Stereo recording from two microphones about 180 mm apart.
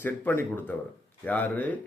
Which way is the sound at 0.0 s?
10° left (ahead or behind).